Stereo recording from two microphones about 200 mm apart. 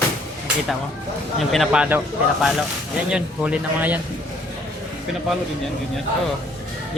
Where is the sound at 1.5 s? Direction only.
5° right (ahead or behind).